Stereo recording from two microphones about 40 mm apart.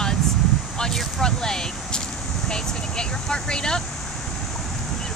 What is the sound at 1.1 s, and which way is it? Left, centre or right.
Speech, centre.